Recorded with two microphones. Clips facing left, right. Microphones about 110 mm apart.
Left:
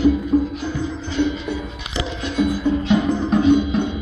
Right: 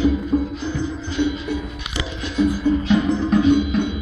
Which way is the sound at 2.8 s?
30° left (ahead or behind).